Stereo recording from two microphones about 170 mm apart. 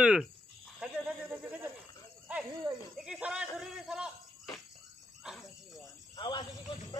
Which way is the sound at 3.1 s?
5° right (ahead or behind).